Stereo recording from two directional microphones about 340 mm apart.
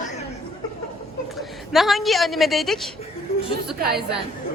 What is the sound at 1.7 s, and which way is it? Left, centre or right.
A man's voice, centre.